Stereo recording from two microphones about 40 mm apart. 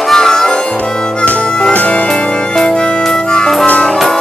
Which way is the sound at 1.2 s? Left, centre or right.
Left.